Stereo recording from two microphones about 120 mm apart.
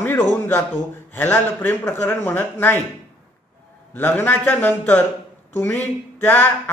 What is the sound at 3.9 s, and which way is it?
Speech, 15° left (ahead or behind).